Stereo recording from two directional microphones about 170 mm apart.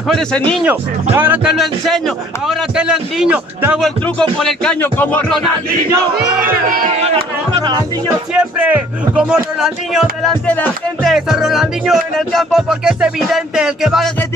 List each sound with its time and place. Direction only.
0.1 s speech: 5° left (ahead or behind)
1.1 s speech: 10° right (ahead or behind); by 5.4 s 10° left (ahead or behind)
6.4 s speech: 55° right (ahead or behind)
7.5 s music: 25° right (ahead or behind)
8.4 s speech: 10° right (ahead or behind)
10.4 s speech: 10° left (ahead or behind)